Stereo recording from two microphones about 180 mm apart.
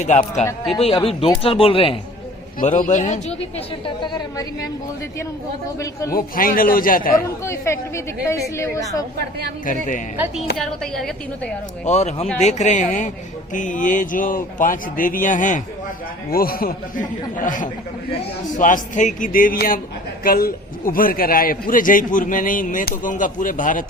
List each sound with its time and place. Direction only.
0.0 s speech: 40° left (ahead or behind)
2.6 s speech: 45° left (ahead or behind)
3.8 s a woman's voice: 25° left (ahead or behind)
6.1 s speech: 50° left (ahead or behind)
7.2 s speech: 15° left (ahead or behind)
10.6 s a woman's voice: centre (ahead or behind)
11.9 s speech: 40° left (ahead or behind)